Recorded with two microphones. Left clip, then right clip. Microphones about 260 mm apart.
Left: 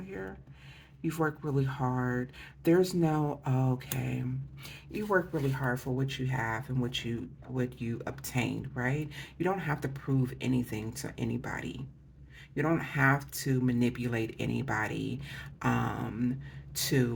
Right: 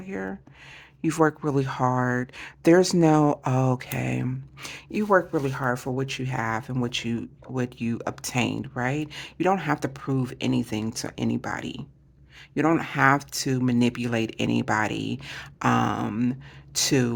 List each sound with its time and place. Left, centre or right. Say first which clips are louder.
0.1 s speech: right 10 dB; right